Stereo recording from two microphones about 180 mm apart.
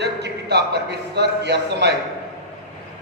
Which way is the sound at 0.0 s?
65° right (ahead or behind).